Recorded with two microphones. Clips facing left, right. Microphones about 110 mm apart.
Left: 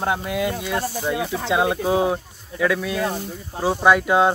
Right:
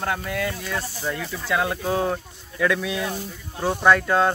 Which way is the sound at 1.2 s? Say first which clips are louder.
Left 7 dB; 65° left (ahead or behind).